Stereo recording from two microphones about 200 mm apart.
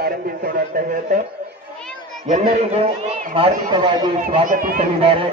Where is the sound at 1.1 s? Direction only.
40° right (ahead or behind).